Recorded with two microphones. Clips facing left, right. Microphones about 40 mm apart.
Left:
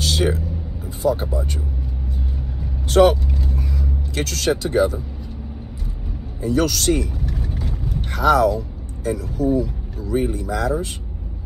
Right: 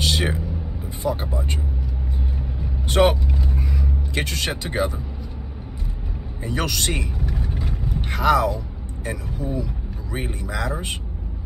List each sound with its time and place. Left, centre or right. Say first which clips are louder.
0.0 s a sound: left 2 dB; right
1.0 s speech: left 5 dB; right
2.9 s vehicle: left 4 dB; right
6.4 s vehicle: left 6 dB; right
10.5 s speech: left 1 dB; right